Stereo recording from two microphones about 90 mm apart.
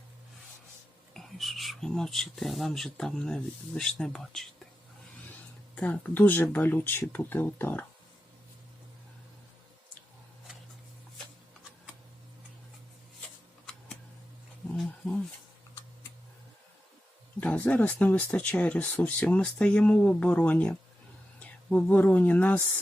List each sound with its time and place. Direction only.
1.1 s speech: centre (ahead or behind)
5.7 s speech: 15° left (ahead or behind)
14.8 s wild animals: 5° left (ahead or behind)
17.4 s speech: 20° left (ahead or behind)